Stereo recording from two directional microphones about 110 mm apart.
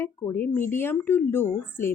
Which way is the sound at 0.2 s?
25° left (ahead or behind).